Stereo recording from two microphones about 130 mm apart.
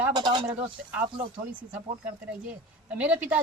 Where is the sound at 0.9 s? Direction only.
10° right (ahead or behind).